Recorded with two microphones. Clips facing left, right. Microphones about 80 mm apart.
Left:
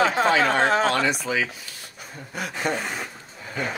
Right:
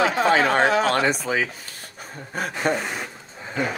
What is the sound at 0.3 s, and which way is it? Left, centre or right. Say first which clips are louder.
Speech: right 1 dB; right.